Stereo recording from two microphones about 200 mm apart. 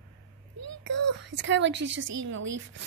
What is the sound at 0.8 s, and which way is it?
A woman's voice, 65° right (ahead or behind).